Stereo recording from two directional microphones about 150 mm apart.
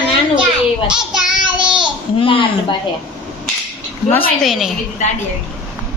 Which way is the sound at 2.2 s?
35° left (ahead or behind).